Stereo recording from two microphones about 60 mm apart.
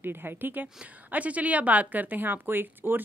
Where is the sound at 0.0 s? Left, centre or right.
Right.